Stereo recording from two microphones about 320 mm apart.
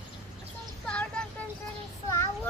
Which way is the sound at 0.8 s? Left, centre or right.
Centre.